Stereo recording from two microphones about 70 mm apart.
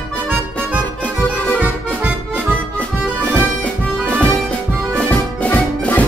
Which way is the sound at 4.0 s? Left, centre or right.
Centre.